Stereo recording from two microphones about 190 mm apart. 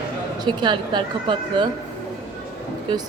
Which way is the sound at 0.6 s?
25° right (ahead or behind).